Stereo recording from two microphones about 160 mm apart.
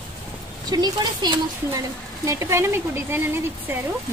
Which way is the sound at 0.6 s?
25° right (ahead or behind).